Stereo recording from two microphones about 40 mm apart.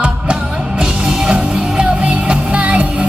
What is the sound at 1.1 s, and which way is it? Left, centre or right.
Music, right.